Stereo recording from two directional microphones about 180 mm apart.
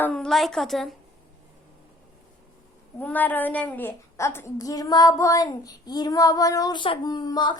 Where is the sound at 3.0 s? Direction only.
10° left (ahead or behind).